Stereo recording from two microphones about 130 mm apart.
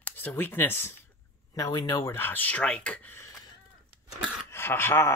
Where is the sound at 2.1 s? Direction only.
15° left (ahead or behind).